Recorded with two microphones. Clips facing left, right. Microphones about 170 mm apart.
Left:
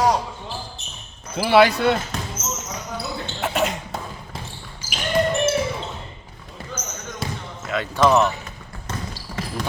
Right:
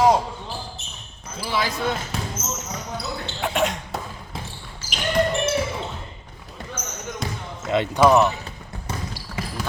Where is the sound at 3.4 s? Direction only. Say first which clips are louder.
Even; centre (ahead or behind).